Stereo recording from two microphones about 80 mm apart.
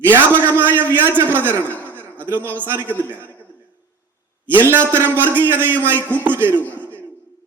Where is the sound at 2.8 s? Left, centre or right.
Left.